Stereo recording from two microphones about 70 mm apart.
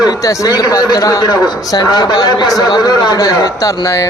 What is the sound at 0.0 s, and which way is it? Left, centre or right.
Speech, left.